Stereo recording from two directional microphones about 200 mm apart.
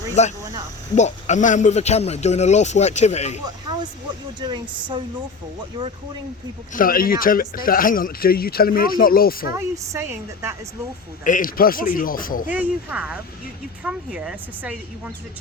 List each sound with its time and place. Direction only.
0.2 s a man's voice: 35° left (ahead or behind)
4.4 s speech: 20° right (ahead or behind)
6.7 s speech: 45° left (ahead or behind)
9.5 s a woman's voice: 15° right (ahead or behind)
11.2 s speech: 40° left (ahead or behind)
12.5 s a woman's voice: 5° right (ahead or behind)